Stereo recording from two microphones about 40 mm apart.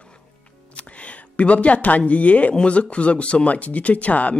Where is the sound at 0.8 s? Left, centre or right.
Left.